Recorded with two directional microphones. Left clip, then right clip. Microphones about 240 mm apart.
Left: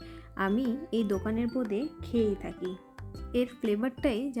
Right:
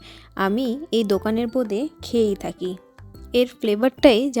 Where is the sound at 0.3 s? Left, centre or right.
Right.